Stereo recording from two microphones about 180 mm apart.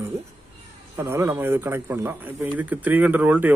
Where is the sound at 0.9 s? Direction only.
15° right (ahead or behind).